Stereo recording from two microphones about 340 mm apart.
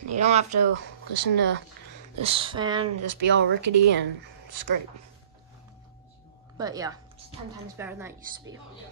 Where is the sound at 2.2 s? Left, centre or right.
Centre.